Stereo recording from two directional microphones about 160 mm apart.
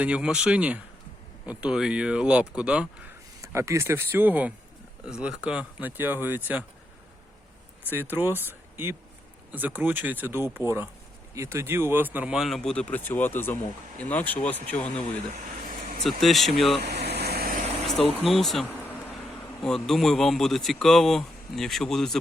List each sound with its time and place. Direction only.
0.0 s speech: 5° right (ahead or behind)
3.4 s speech: 20° right (ahead or behind)
7.9 s a man's voice: 10° right (ahead or behind); by 15.0 s 10° left (ahead or behind)
16.0 s a man's voice: centre (ahead or behind)
16.8 s air conditioning: 90° right
18.3 s a man's voice: centre (ahead or behind)
19.6 s a man's voice: 5° left (ahead or behind)